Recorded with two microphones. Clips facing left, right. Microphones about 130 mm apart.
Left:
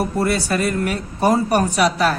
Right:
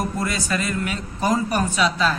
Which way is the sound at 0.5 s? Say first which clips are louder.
Left 5 dB; 55° left (ahead or behind).